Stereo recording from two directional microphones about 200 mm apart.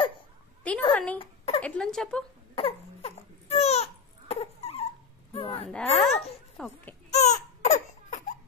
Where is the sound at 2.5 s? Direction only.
30° left (ahead or behind).